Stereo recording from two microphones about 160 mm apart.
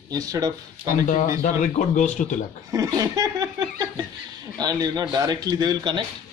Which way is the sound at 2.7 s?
20° right (ahead or behind).